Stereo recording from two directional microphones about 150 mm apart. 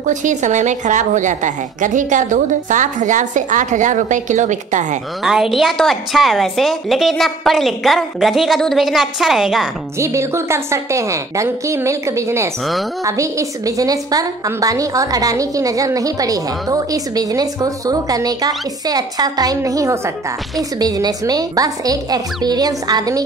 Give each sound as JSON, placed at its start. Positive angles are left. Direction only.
{"t": 0.0, "sound": "a woman's voice", "side_deg": -55}
{"t": 5.2, "sound": "a woman's voice", "side_deg": -5}
{"t": 9.9, "sound": "a woman's voice", "side_deg": -20}